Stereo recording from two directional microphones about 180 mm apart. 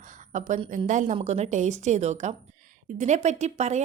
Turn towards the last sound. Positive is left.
turn(degrees=-40)  # may be behind; listen again after turning